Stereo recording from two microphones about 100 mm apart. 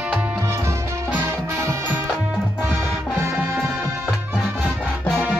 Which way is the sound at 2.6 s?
25° right (ahead or behind).